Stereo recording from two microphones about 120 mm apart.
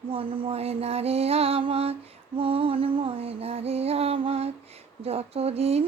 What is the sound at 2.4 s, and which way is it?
Music, 50° right (ahead or behind).